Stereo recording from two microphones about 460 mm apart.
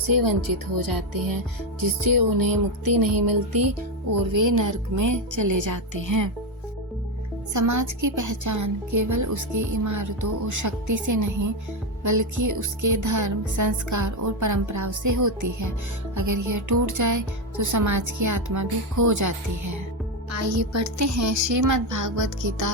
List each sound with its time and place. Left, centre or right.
0.1 s music: right
0.4 s speech: right
0.9 s music: right
4.3 s speech: right
4.6 s a woman's voice: right
7.5 s a woman's voice: right